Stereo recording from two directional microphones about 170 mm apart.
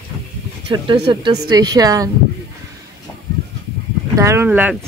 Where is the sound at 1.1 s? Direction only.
25° right (ahead or behind).